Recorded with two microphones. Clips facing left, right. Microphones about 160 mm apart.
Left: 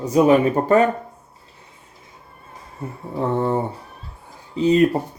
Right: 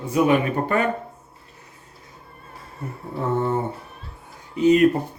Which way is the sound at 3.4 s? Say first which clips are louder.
Left 2 dB; 35° left (ahead or behind).